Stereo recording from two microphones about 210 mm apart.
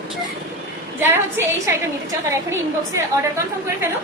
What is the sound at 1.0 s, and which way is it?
Speech, 10° right (ahead or behind).